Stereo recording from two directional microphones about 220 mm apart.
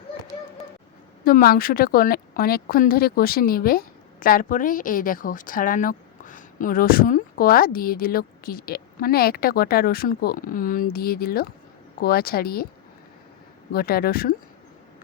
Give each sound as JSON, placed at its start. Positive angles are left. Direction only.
{"t": 1.2, "sound": "a woman's voice", "side_deg": 40}
{"t": 13.7, "sound": "a woman's voice", "side_deg": 45}